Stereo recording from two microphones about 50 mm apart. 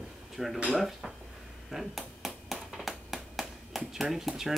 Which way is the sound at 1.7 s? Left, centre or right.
Centre.